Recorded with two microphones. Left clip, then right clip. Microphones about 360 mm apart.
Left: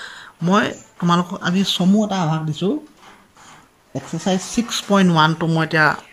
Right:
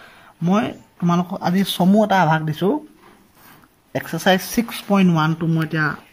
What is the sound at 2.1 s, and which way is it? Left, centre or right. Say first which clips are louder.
Speech: right 7 dB; right.